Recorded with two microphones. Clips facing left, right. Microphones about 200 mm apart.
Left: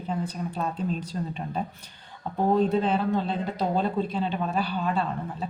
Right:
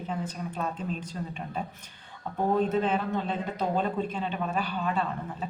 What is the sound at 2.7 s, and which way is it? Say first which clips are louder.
Speech: left 3 dB; 35° left (ahead or behind).